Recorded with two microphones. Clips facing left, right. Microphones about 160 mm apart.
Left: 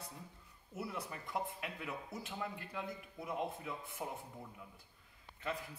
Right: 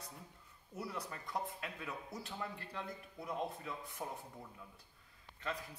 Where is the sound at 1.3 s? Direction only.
15° left (ahead or behind).